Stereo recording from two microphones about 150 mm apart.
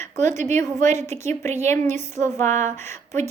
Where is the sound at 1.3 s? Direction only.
50° right (ahead or behind).